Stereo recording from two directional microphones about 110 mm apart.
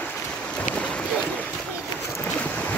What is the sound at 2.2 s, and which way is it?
Boat, 15° left (ahead or behind).